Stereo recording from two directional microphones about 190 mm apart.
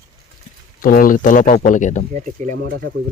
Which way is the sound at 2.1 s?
40° right (ahead or behind).